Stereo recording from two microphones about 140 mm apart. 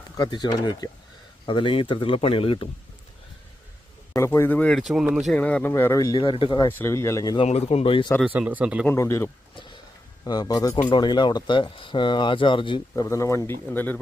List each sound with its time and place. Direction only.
0.2 s speech: 30° left (ahead or behind)
4.1 s speech: 20° left (ahead or behind); by 5.3 s 5° right (ahead or behind)
5.3 s speech: 10° left (ahead or behind)
6.1 s speech: 35° left (ahead or behind)
6.6 s speech: 15° left (ahead or behind)
7.4 s speech: 50° left (ahead or behind)
8.3 s speech: 10° right (ahead or behind)
8.9 s speech: 20° left (ahead or behind); by 13.1 s 35° left (ahead or behind)
13.1 s speech: 20° left (ahead or behind)